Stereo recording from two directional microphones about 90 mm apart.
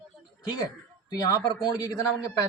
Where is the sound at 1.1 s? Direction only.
35° left (ahead or behind).